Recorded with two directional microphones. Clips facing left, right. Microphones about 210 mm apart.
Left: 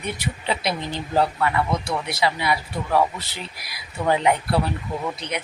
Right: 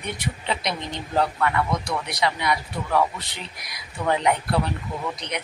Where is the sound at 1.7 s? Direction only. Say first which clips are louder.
Left 2 dB; 25° left (ahead or behind).